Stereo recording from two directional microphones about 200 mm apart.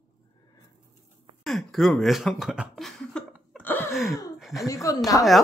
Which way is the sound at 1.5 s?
Centre (ahead or behind).